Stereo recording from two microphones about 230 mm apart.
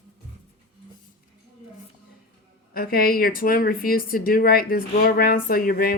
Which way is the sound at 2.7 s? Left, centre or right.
Left.